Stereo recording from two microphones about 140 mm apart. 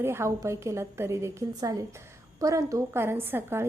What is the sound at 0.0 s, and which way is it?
A woman's voice, 20° right (ahead or behind).